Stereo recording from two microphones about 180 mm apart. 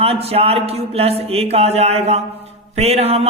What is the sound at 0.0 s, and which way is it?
A man's voice, 35° right (ahead or behind).